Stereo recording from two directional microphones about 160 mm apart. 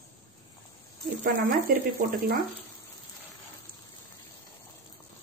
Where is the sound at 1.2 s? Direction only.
60° right (ahead or behind).